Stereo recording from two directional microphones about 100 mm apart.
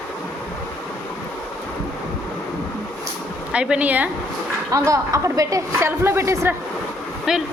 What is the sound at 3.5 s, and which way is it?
Speech, 10° right (ahead or behind).